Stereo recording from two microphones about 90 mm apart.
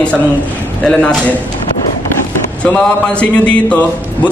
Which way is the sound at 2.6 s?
15° left (ahead or behind).